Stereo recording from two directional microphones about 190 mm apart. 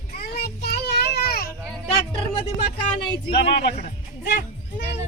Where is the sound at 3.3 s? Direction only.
60° left (ahead or behind).